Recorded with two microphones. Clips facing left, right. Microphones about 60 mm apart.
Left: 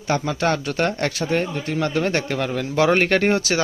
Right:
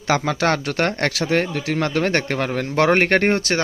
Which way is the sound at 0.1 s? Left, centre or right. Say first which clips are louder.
Right 2 dB; right.